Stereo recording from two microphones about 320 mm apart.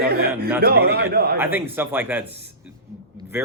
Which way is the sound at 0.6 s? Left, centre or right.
Right.